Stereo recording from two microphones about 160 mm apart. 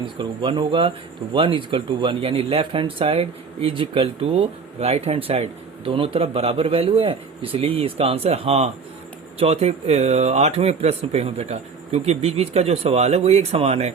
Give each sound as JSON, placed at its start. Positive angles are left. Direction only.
{"t": 0.0, "sound": "speech", "side_deg": -30}